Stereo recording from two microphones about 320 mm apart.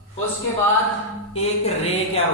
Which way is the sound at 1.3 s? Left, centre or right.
Centre.